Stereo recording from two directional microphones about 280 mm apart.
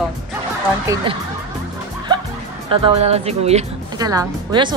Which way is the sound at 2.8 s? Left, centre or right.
Right.